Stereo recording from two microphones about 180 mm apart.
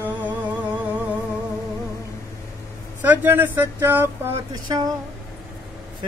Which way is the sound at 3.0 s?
10° right (ahead or behind).